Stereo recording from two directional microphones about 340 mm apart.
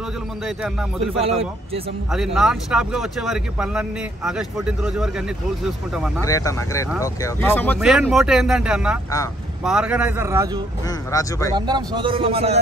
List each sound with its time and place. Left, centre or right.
1.0 s a man's voice: centre
2.1 s speech: centre
6.2 s speech: centre
11.1 s speech: centre
11.5 s a man's voice: centre